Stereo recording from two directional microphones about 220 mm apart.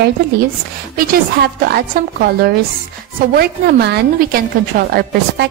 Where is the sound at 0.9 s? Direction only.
45° right (ahead or behind).